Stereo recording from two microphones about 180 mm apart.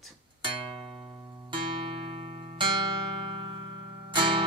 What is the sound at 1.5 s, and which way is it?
Music, 30° right (ahead or behind).